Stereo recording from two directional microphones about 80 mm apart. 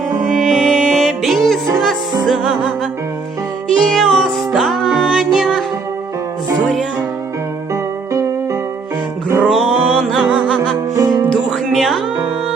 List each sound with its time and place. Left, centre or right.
0.3 s music: centre
3.8 s music: centre
7.7 s music: right
9.4 s music: centre
10.9 s music: right
11.5 s music: centre